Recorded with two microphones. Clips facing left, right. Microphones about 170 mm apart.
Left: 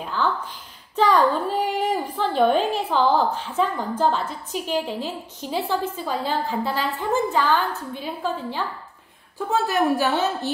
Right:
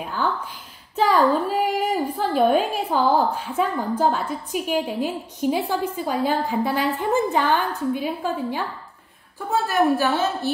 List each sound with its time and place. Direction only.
0.9 s a woman's voice: 10° right (ahead or behind)
9.7 s a woman's voice: 15° left (ahead or behind)